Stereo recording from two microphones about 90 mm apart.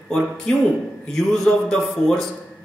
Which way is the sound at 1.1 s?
5° left (ahead or behind).